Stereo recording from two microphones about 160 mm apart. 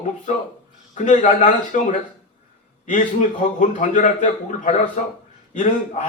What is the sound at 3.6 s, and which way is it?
A man's voice, 55° left (ahead or behind).